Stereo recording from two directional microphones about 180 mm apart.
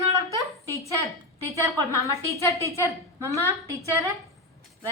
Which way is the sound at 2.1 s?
15° left (ahead or behind).